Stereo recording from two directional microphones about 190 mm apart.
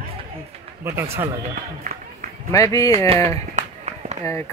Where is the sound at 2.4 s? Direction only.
15° left (ahead or behind).